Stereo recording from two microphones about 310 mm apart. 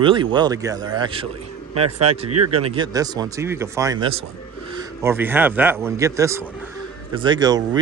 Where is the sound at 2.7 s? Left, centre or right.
Centre.